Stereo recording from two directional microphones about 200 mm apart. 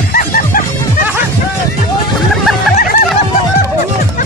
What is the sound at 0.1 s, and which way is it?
Music, 45° left (ahead or behind).